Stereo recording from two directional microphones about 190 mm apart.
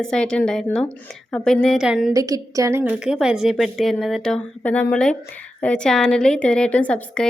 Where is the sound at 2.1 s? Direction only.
20° right (ahead or behind).